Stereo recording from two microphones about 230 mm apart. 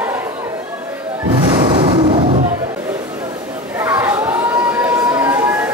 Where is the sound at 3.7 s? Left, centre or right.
Centre.